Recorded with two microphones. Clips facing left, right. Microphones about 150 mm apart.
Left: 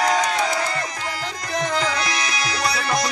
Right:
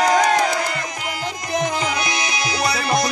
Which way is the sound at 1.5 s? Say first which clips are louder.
Right 1 dB; 15° right (ahead or behind).